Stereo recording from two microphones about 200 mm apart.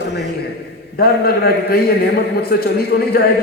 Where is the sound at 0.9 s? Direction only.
50° left (ahead or behind).